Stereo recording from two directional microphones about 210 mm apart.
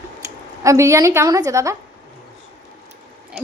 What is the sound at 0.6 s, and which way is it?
A woman's voice, 15° right (ahead or behind).